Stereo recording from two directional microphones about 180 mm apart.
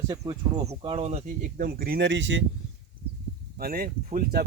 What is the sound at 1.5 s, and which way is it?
Speech, 55° right (ahead or behind).